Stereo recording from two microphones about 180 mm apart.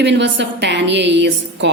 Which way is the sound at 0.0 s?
75° right (ahead or behind).